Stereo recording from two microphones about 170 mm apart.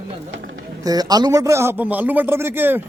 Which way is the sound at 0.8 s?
20° right (ahead or behind).